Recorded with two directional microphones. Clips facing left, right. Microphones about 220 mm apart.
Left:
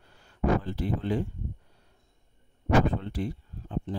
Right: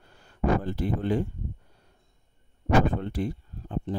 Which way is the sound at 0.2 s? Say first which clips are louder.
Right 1 dB; 50° right (ahead or behind).